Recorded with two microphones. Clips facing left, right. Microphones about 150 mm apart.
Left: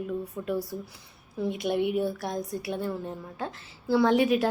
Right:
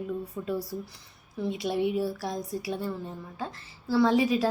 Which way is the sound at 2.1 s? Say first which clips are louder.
Left 1 dB; centre (ahead or behind).